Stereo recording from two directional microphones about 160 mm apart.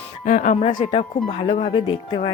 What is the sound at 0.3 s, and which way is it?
Speech, 55° left (ahead or behind).